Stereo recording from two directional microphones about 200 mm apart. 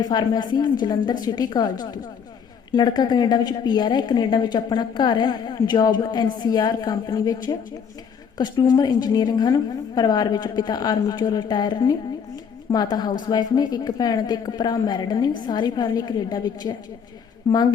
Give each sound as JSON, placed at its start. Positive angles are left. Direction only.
{"t": 0.0, "sound": "a woman's voice", "side_deg": 20}
{"t": 2.7, "sound": "a woman's voice", "side_deg": 20}